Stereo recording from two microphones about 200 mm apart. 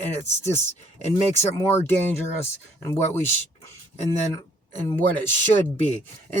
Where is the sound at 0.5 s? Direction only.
35° left (ahead or behind).